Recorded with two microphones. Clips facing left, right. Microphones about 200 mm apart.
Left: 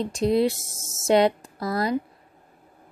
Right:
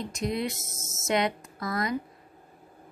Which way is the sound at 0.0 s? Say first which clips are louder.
Left 9 dB; 30° left (ahead or behind).